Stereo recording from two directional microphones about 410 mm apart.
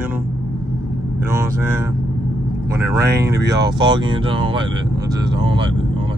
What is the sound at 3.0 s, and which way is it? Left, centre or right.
Speech, right.